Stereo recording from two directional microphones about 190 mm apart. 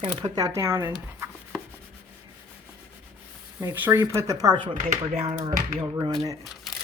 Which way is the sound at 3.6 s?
10° right (ahead or behind).